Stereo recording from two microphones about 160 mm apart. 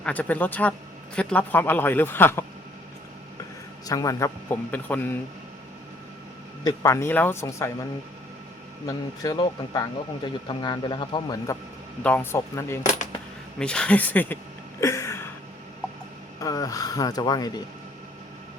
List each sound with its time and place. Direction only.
0.0 s a man's voice: 10° left (ahead or behind)
3.8 s a man's voice: 20° left (ahead or behind)
6.7 s a man's voice: 20° left (ahead or behind)
8.9 s speech: 25° left (ahead or behind)
12.0 s a man's voice: 10° left (ahead or behind)
12.8 s speech: 50° left (ahead or behind)
13.6 s a man's voice: 5° left (ahead or behind)
14.8 s a sound: 20° left (ahead or behind)
16.4 s speech: 20° left (ahead or behind)